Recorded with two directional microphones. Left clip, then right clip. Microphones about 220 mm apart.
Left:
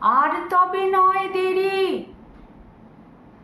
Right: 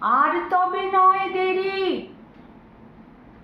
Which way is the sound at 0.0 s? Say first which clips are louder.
Left 1 dB; 20° left (ahead or behind).